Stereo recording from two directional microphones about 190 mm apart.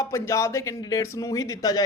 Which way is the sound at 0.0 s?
15° left (ahead or behind).